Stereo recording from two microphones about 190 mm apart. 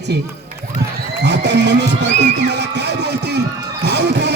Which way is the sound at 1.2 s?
65° right (ahead or behind).